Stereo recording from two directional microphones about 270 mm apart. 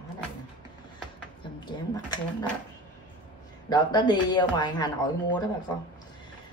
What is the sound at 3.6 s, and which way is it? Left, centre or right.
Speech, centre.